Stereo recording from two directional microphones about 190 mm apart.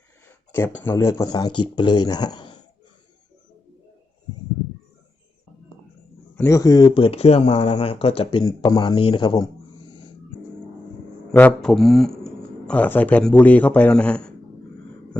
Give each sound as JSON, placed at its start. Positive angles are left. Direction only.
{"t": 0.3, "sound": "speech", "side_deg": 10}
{"t": 6.3, "sound": "speech", "side_deg": 15}
{"t": 11.3, "sound": "speech", "side_deg": 5}